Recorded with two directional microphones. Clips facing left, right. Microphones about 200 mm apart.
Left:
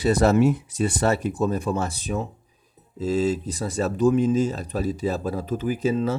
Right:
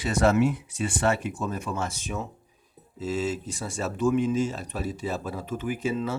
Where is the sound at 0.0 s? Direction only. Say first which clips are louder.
Left 4 dB; 35° left (ahead or behind).